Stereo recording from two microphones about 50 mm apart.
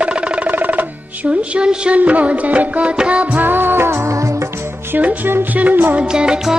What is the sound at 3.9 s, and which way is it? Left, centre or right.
Music of bollywood, right.